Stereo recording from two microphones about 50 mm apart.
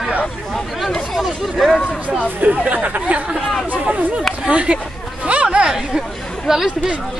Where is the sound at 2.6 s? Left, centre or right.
Right.